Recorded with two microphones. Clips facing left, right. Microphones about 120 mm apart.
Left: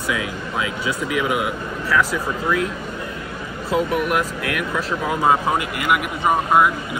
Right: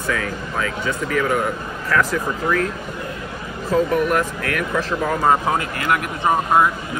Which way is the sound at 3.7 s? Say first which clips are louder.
Right 2 dB; 10° left (ahead or behind).